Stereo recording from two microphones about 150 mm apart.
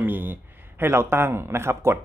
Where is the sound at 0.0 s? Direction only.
15° right (ahead or behind).